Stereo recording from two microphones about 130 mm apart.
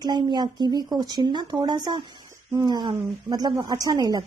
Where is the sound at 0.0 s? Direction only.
35° right (ahead or behind).